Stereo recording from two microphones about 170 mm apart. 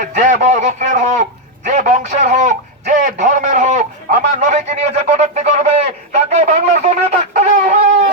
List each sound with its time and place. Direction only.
0.0 s a man's voice: 45° right (ahead or behind)
6.1 s shofar: 40° right (ahead or behind)